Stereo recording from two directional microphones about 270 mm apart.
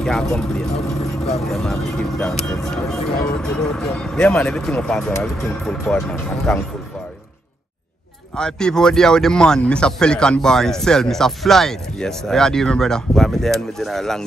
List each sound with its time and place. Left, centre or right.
0.0 s speech: centre
8.4 s speech: centre